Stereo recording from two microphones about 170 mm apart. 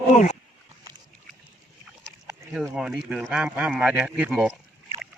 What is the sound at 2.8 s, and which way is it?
A man's voice, 5° right (ahead or behind).